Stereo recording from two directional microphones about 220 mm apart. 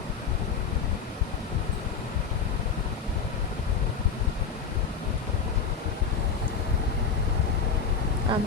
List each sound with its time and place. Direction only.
8.3 s speech: 20° right (ahead or behind)